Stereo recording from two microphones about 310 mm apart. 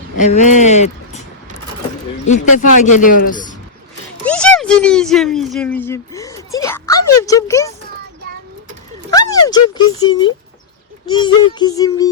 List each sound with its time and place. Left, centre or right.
0.2 s speech: left
2.2 s a man's voice: left
4.3 s speech: centre
9.0 s speech: centre
11.6 s music: centre